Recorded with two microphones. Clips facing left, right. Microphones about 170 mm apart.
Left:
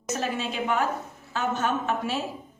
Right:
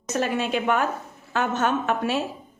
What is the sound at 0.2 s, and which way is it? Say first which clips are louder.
A woman's voice: right 8 dB; 65° right (ahead or behind).